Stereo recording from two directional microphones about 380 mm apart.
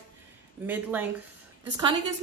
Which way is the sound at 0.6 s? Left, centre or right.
Centre.